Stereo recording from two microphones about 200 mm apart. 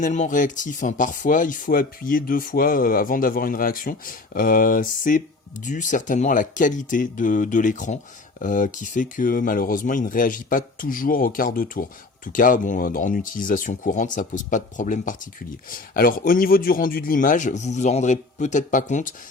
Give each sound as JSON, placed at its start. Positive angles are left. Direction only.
{"t": 0.0, "sound": "speech", "side_deg": 40}